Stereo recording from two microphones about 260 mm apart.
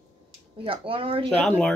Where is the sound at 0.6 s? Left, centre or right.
Right.